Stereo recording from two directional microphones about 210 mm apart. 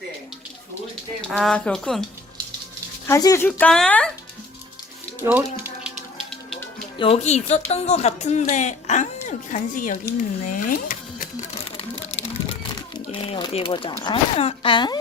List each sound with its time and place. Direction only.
1.3 s speech: centre (ahead or behind)
3.1 s speech: 15° left (ahead or behind)
5.2 s music: 10° right (ahead or behind)
7.0 s speech: 30° left (ahead or behind)